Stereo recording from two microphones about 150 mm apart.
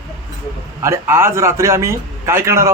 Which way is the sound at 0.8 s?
15° right (ahead or behind).